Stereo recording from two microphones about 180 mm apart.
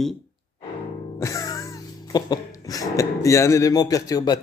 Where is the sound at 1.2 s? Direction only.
20° left (ahead or behind).